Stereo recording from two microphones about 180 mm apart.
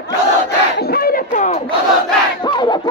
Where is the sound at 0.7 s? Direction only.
60° left (ahead or behind); by 1.6 s 40° left (ahead or behind).